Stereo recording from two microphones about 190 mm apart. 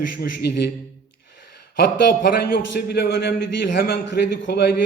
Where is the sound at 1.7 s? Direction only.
55° left (ahead or behind).